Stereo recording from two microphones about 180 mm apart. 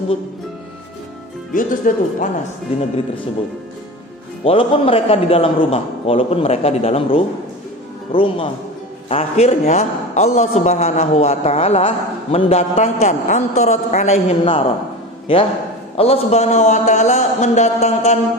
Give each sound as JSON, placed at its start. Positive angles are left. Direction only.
{"t": 1.5, "sound": "speech", "side_deg": 45}
{"t": 4.4, "sound": "a man's voice", "side_deg": 30}